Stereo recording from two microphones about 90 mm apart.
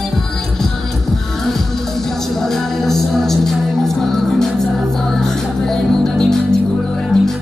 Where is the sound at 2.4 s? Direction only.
5° left (ahead or behind).